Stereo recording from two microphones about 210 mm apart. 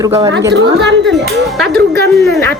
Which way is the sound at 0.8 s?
55° right (ahead or behind).